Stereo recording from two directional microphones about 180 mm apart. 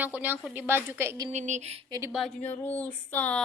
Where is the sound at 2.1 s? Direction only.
Centre (ahead or behind).